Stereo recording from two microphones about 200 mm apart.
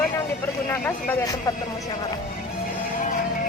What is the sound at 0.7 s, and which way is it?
Speech, 10° left (ahead or behind).